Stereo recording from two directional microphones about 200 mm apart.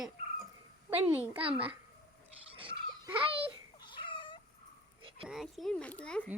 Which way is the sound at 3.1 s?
25° right (ahead or behind).